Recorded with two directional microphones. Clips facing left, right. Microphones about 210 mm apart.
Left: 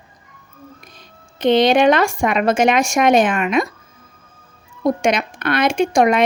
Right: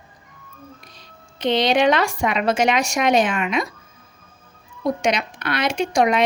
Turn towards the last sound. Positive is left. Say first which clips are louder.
# left 4 dB
turn(degrees=50)  # may be behind; listen again after turning